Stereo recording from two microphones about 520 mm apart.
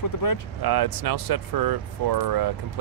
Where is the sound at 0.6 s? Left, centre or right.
Right.